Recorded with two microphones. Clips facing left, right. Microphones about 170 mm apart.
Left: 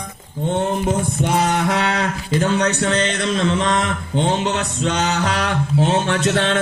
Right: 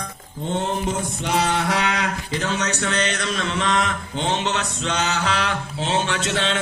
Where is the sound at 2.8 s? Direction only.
30° left (ahead or behind).